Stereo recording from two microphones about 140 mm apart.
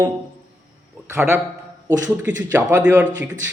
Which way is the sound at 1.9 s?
10° right (ahead or behind).